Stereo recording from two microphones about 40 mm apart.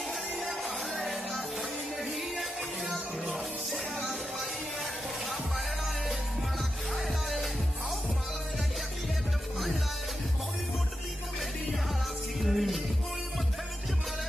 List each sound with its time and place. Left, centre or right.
0.4 s music: centre
3.3 s music: centre
7.0 s music: centre
12.4 s music: centre